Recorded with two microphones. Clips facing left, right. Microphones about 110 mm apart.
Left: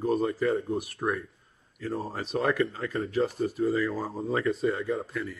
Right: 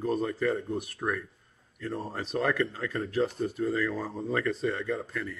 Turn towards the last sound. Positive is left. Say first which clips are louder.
# left 2 dB
turn(degrees=5)  # may be behind; listen again after turning